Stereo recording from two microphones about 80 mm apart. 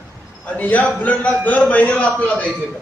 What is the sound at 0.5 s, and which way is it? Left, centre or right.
A man's voice, centre.